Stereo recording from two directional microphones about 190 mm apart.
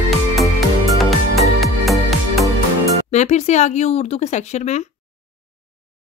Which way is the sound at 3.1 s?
35° left (ahead or behind).